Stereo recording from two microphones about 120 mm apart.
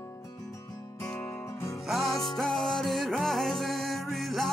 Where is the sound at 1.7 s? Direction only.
Centre (ahead or behind).